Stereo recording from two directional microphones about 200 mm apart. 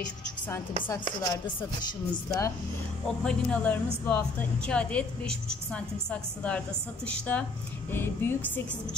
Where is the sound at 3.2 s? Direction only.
5° left (ahead or behind).